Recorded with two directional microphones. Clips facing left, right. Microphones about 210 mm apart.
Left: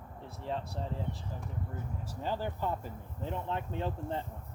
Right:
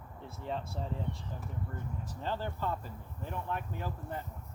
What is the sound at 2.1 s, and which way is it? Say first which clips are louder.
Speech: left 2 dB; 10° left (ahead or behind).